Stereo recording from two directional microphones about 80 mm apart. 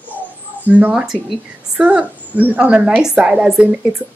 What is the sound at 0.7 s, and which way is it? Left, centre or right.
A woman's voice, centre.